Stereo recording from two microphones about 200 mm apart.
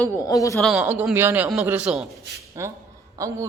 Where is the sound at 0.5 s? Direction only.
Centre (ahead or behind); by 3.4 s 15° right (ahead or behind).